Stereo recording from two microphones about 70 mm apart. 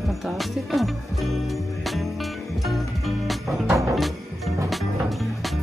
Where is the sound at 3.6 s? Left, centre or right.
Right.